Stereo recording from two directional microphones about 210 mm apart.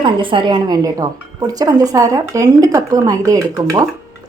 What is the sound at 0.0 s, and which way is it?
Speech, 25° right (ahead or behind).